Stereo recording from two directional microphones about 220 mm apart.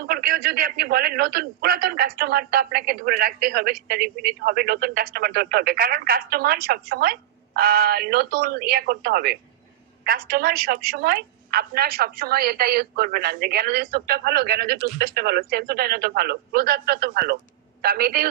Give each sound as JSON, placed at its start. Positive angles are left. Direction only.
{"t": 0.0, "sound": "speech", "side_deg": -40}